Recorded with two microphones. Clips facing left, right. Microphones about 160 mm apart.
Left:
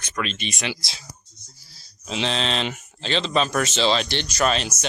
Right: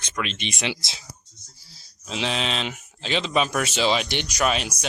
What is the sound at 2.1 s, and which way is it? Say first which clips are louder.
Speech: left 2 dB; 5° right (ahead or behind).